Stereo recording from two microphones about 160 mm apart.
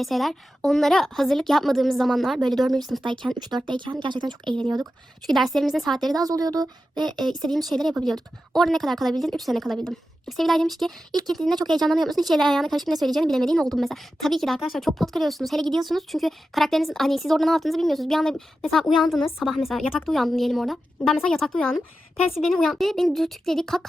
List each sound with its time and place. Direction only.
0.0 s speech: centre (ahead or behind)
3.0 s speech: 30° right (ahead or behind)
4.4 s speech: 5° left (ahead or behind)
4.7 s speech: 25° right (ahead or behind)
5.3 s speech: centre (ahead or behind)
6.2 s speech: 25° right (ahead or behind)
7.7 s speech: centre (ahead or behind)